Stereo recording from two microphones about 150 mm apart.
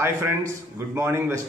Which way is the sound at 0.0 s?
20° right (ahead or behind).